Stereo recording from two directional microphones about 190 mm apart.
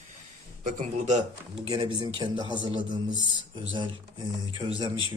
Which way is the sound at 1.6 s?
25° right (ahead or behind).